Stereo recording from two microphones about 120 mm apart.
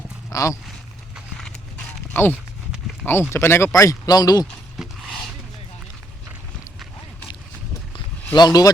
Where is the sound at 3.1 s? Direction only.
20° left (ahead or behind).